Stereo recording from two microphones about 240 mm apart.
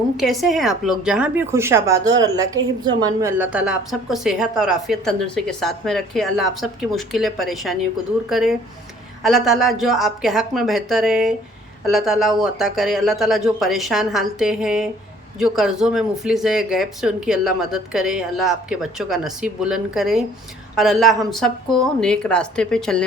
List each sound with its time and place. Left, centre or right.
0.2 s a woman's voice: centre